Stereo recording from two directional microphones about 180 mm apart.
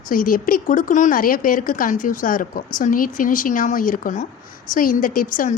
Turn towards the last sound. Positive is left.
turn(degrees=50)  # may be behind; listen again after turning